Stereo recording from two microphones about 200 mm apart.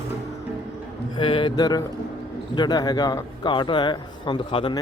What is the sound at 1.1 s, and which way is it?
A man's voice, 25° left (ahead or behind).